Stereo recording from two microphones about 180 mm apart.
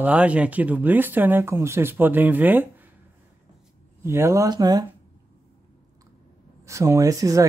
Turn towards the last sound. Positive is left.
turn(degrees=-20)  # may be behind; listen again after turning